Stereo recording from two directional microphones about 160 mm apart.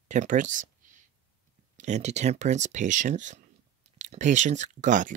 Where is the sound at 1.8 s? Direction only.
45° right (ahead or behind).